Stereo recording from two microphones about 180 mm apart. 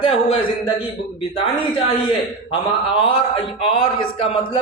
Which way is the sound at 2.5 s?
30° left (ahead or behind).